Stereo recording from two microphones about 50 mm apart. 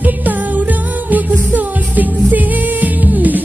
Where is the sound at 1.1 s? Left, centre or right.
Right.